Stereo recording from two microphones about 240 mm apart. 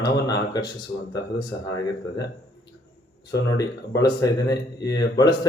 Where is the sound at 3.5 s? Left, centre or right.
Centre.